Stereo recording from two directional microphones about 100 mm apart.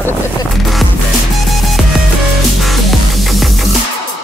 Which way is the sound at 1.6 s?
Centre (ahead or behind).